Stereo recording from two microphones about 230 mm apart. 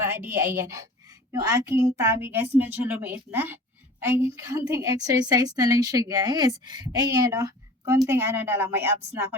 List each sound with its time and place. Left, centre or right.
0.0 s a woman's voice: centre